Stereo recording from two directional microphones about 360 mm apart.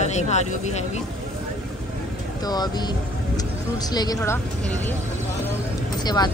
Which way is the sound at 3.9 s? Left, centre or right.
Centre.